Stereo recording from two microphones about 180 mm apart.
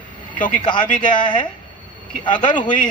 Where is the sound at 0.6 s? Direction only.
25° left (ahead or behind).